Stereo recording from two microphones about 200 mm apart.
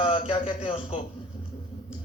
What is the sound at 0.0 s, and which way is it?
Speech, 25° left (ahead or behind).